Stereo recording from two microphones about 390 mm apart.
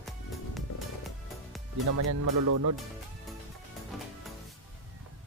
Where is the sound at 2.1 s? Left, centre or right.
Right.